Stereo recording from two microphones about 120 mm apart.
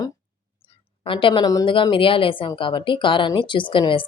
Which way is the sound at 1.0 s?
45° left (ahead or behind).